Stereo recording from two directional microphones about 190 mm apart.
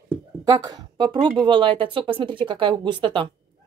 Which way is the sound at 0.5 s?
20° right (ahead or behind).